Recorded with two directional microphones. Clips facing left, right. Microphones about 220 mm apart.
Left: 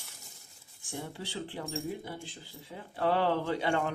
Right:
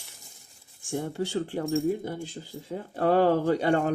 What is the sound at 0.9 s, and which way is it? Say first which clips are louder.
Speech: right 10 dB; 50° right (ahead or behind).